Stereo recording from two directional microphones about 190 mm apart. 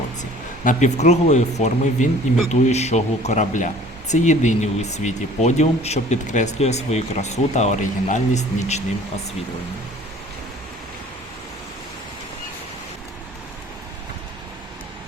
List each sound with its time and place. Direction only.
0.2 s speech: 40° left (ahead or behind)